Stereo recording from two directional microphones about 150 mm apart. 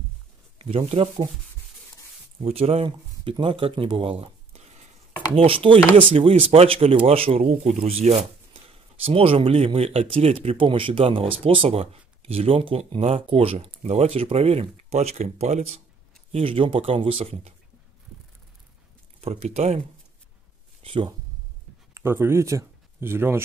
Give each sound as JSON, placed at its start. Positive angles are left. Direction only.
{"t": 0.6, "sound": "speech", "side_deg": -40}
{"t": 2.4, "sound": "speech", "side_deg": -45}
{"t": 19.2, "sound": "speech", "side_deg": -40}
{"t": 20.8, "sound": "speech", "side_deg": -35}
{"t": 21.9, "sound": "speech", "side_deg": -15}